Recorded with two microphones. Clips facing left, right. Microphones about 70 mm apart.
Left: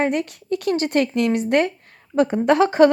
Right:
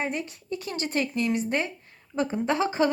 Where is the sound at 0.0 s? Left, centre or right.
Left.